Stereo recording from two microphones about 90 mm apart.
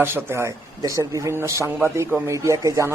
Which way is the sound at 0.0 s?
25° right (ahead or behind).